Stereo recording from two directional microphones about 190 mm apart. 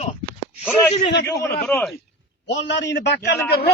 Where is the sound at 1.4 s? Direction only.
10° left (ahead or behind).